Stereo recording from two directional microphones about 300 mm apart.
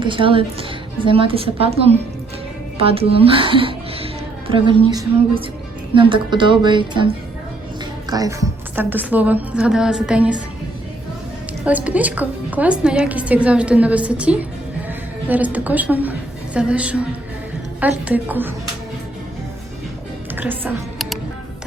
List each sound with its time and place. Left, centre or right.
0.0 s a woman's voice: centre
8.1 s a woman's voice: centre
11.6 s a woman's voice: centre
20.3 s music: centre